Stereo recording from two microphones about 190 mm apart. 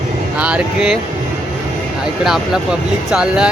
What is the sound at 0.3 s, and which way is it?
Speech, 5° right (ahead or behind).